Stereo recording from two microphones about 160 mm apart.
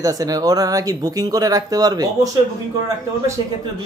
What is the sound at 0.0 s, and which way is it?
Speech, 25° right (ahead or behind).